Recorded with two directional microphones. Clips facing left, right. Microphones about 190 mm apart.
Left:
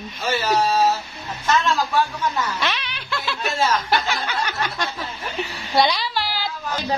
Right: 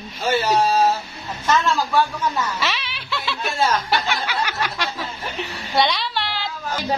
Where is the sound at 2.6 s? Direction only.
5° right (ahead or behind).